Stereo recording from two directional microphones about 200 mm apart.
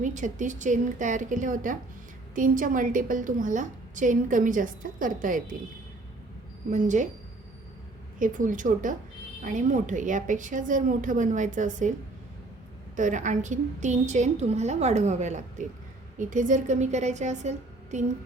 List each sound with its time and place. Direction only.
0.0 s a woman's voice: 40° right (ahead or behind)
6.7 s a woman's voice: 40° right (ahead or behind)
8.2 s a woman's voice: 40° right (ahead or behind)
13.0 s a woman's voice: 40° right (ahead or behind)